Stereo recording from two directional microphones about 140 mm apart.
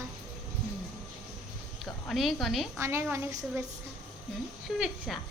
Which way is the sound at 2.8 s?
20° right (ahead or behind).